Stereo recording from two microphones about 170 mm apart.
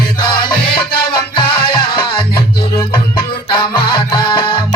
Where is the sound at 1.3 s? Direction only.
25° left (ahead or behind).